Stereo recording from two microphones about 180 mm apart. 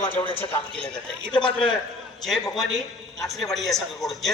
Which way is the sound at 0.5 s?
5° left (ahead or behind).